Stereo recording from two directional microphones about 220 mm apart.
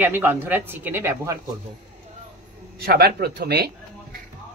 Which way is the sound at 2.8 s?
45° right (ahead or behind).